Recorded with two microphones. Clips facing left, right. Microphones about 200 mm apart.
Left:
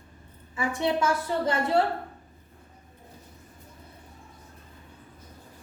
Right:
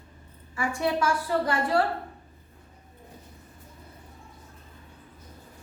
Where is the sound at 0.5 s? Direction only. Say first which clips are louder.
Left 1 dB; 20° left (ahead or behind).